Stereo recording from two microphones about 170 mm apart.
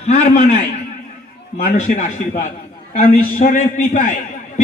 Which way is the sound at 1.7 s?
45° left (ahead or behind).